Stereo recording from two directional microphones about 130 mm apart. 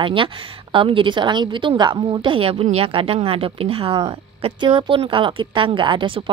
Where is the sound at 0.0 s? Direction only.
40° right (ahead or behind).